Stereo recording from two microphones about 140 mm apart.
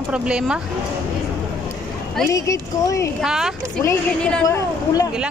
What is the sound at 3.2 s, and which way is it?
Speech, 5° right (ahead or behind).